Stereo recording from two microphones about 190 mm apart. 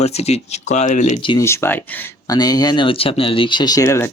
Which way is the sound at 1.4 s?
15° left (ahead or behind).